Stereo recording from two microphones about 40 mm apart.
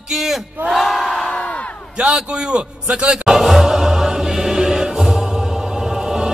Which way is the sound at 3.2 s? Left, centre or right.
Centre.